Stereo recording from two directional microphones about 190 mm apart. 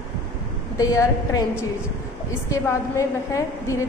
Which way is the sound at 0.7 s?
20° left (ahead or behind).